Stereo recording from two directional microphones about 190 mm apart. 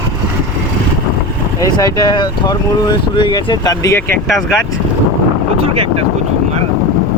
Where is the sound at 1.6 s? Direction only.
20° left (ahead or behind).